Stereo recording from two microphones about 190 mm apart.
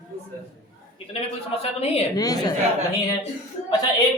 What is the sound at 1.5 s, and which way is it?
Speech, 30° left (ahead or behind).